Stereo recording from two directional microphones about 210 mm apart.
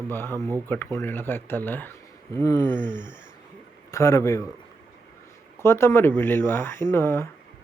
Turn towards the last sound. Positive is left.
turn(degrees=10)  # may be behind; listen again after turning